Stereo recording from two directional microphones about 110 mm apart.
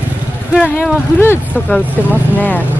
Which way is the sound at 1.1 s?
20° left (ahead or behind).